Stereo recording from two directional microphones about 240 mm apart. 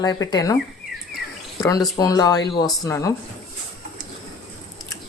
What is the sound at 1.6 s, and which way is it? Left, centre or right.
Speech, centre.